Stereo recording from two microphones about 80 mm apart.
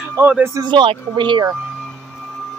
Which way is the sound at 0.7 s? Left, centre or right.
Right.